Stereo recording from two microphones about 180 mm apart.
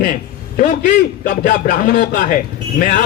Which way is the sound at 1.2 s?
55° left (ahead or behind).